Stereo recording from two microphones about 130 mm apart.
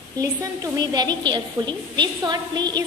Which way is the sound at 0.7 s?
30° right (ahead or behind).